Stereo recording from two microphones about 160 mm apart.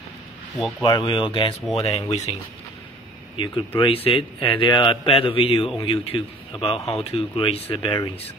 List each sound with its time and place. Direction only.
0.6 s speech: centre (ahead or behind)
0.8 s a man's voice: 30° left (ahead or behind)
3.3 s a man's voice: 30° left (ahead or behind)